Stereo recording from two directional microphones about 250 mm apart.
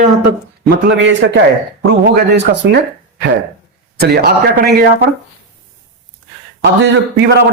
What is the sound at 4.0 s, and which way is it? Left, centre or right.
Speech, right.